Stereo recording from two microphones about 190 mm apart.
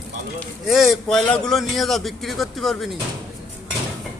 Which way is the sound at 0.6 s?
Centre (ahead or behind).